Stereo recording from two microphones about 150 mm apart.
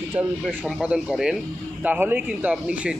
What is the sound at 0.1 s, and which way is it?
Speech, 10° right (ahead or behind).